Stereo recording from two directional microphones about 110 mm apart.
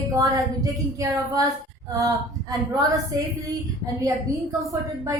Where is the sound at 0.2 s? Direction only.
35° right (ahead or behind).